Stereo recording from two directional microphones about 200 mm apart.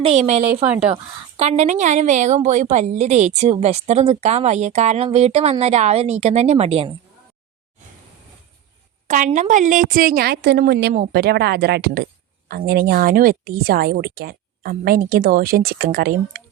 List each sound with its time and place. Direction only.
0.0 s a woman's voice: 30° right (ahead or behind)
0.6 s speech: 5° right (ahead or behind)
1.4 s a woman's voice: 35° right (ahead or behind)
9.0 s a woman's voice: 40° right (ahead or behind)